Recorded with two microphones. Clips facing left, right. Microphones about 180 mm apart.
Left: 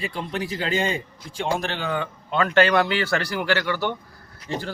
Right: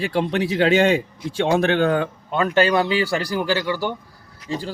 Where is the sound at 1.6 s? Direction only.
55° right (ahead or behind).